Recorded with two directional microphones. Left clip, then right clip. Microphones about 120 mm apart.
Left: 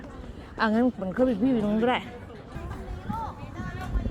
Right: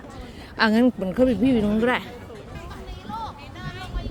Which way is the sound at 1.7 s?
40° right (ahead or behind).